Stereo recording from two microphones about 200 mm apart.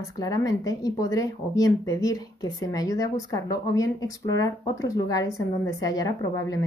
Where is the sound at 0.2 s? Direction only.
15° left (ahead or behind).